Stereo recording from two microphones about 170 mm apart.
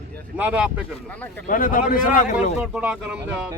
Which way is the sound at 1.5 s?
50° left (ahead or behind).